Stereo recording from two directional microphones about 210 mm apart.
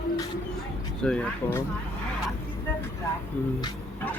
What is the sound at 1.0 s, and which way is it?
Speech, 5° left (ahead or behind).